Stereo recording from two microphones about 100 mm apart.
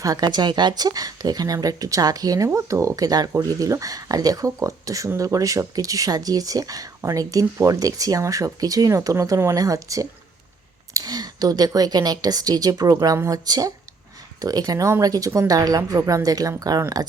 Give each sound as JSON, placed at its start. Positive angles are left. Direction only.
{"t": 0.0, "sound": "a woman's voice", "side_deg": -40}